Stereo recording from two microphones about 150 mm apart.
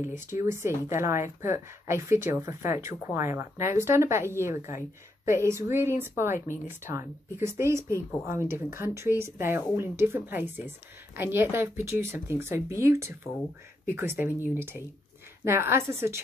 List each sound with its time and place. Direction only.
0.0 s a woman's voice: 15° right (ahead or behind)